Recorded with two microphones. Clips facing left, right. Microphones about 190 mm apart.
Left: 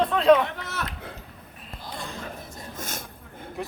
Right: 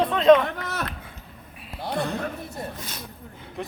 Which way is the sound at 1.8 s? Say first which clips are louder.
Right 10 dB; 65° right (ahead or behind).